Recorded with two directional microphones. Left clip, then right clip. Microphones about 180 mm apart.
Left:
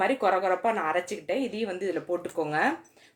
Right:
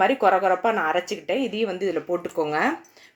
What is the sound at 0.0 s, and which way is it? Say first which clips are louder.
Speech: right 6 dB; 25° right (ahead or behind).